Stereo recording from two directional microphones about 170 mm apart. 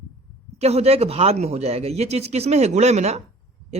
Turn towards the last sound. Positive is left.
turn(degrees=-40)  # may be behind; listen again after turning